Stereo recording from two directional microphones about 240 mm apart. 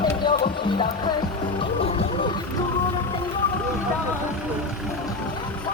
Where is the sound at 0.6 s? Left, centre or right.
Centre.